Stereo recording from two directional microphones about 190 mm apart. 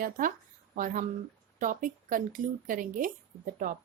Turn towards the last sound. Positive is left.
turn(degrees=-45)  # may be behind; listen again after turning